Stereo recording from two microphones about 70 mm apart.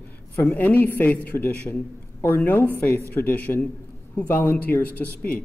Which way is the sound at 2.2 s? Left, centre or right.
Left.